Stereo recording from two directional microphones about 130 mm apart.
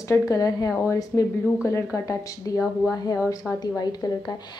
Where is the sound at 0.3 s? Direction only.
25° left (ahead or behind).